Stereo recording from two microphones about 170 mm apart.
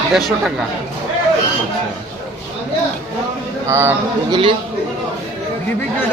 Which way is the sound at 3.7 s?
15° right (ahead or behind).